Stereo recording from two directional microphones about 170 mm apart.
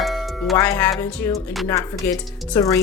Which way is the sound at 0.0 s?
Centre (ahead or behind).